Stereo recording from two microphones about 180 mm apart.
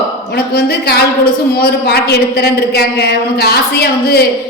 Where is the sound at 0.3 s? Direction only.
65° left (ahead or behind).